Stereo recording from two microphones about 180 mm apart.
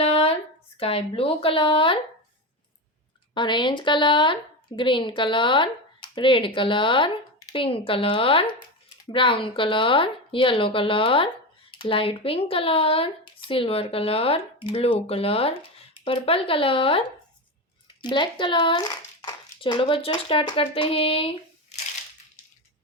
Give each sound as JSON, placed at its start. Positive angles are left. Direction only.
{"t": 0.0, "sound": "a sound", "side_deg": 35}
{"t": 0.8, "sound": "speech", "side_deg": 30}
{"t": 3.3, "sound": "speech", "side_deg": 25}
{"t": 18.0, "sound": "speech", "side_deg": 25}